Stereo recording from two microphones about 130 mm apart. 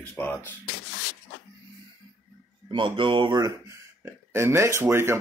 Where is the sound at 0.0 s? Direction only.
15° left (ahead or behind).